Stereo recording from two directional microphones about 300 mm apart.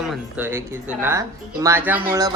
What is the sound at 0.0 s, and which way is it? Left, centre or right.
Speech, centre.